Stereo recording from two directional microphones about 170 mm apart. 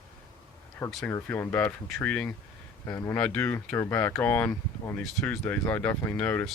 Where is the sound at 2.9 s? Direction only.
20° left (ahead or behind).